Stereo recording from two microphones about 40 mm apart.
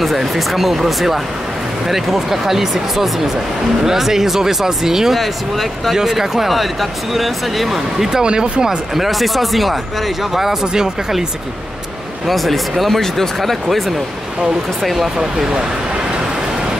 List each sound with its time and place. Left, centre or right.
0.0 s speech: centre
5.2 s speech: centre
5.9 s speech: centre
8.1 s speech: centre
8.9 s speech: centre
12.3 s speech: centre
15.1 s speech: centre